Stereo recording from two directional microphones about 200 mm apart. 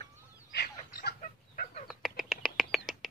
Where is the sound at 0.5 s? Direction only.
50° left (ahead or behind).